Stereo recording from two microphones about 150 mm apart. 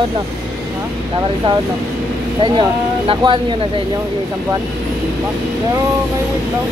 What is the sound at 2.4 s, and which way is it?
Speech, 30° right (ahead or behind).